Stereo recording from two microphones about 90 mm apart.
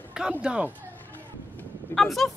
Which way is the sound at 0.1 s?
10° right (ahead or behind).